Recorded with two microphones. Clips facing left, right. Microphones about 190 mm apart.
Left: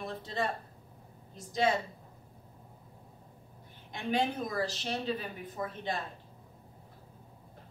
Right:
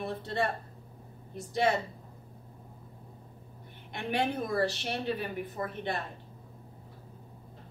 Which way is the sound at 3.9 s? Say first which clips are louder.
Even; 65° right (ahead or behind).